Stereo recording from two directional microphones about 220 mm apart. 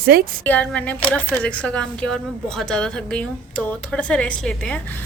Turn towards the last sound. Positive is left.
turn(degrees=5)  # may be behind; listen again after turning